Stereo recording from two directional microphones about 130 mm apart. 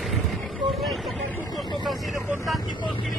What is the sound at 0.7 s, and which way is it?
Vehicle, centre (ahead or behind).